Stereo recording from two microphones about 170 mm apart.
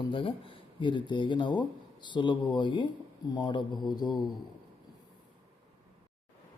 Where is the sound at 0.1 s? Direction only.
30° left (ahead or behind).